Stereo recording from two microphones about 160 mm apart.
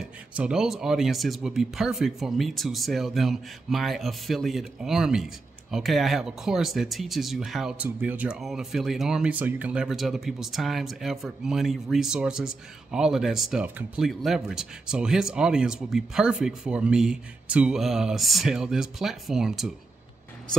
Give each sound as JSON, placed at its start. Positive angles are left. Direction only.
{"t": 0.4, "sound": "speech", "side_deg": -5}